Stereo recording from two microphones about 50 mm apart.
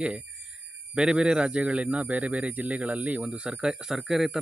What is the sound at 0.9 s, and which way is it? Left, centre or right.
Speech, centre.